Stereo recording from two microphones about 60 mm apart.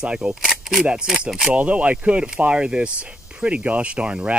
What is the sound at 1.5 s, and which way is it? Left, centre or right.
Speech, right.